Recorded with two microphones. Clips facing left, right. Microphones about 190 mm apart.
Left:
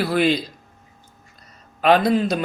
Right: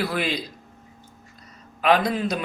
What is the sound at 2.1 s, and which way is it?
Speech, 30° left (ahead or behind).